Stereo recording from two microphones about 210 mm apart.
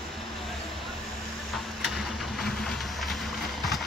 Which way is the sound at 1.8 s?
Centre (ahead or behind).